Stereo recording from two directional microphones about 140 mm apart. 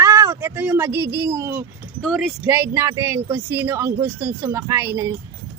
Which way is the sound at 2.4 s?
15° right (ahead or behind).